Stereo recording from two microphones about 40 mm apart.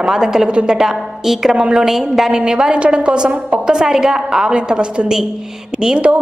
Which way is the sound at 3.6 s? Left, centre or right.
Centre.